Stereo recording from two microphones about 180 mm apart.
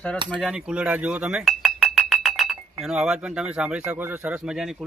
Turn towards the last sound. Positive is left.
turn(degrees=-5)  # may be behind; listen again after turning